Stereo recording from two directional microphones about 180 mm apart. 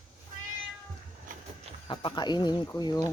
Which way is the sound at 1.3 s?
45° right (ahead or behind).